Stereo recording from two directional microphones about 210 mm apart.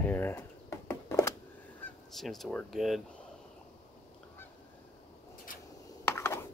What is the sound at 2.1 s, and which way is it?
Speech, centre (ahead or behind).